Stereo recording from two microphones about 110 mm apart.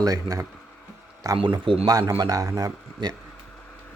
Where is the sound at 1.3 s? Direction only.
50° right (ahead or behind).